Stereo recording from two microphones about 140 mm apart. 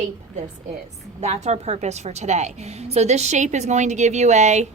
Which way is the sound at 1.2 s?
50° right (ahead or behind).